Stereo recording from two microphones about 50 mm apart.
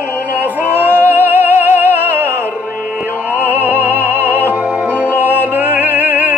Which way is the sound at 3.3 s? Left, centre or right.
Left.